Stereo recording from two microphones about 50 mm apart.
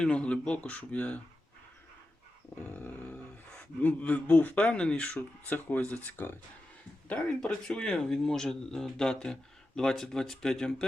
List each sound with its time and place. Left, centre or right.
0.0 s speech: centre
2.7 s a man's voice: left
5.5 s a man's voice: left
7.4 s speech: centre